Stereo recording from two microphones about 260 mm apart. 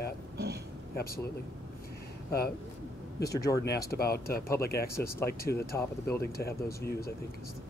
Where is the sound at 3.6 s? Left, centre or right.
Left.